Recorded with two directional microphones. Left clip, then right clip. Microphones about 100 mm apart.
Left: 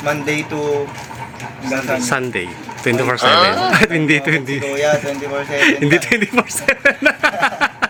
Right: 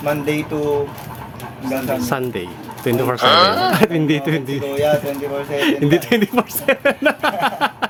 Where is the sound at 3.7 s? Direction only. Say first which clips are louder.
Left 3 dB; 10° right (ahead or behind).